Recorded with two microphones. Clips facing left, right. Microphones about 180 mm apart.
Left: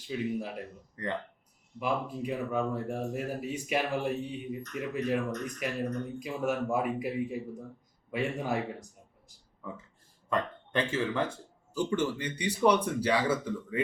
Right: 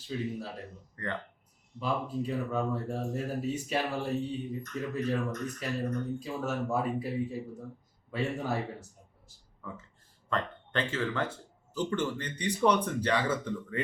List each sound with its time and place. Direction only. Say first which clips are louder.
0.1 s speech: left 2 dB; 15° left (ahead or behind)